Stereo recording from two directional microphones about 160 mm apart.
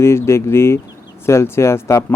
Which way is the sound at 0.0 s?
15° left (ahead or behind).